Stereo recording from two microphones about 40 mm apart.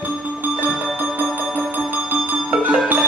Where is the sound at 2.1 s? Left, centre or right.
Right.